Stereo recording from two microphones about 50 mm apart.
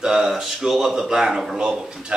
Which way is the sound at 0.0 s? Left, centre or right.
Centre.